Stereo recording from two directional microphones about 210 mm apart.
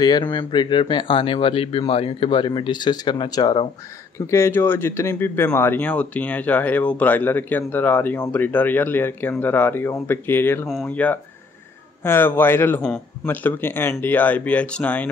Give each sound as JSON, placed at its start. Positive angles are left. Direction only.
{"t": 0.0, "sound": "speech", "side_deg": 20}